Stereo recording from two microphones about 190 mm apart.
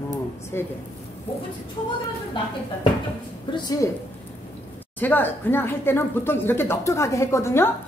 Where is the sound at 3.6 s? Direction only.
20° left (ahead or behind).